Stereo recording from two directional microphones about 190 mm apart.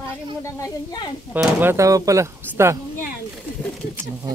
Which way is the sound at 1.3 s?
10° right (ahead or behind).